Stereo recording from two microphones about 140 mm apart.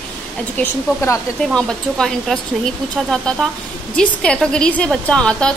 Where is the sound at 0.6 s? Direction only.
20° left (ahead or behind).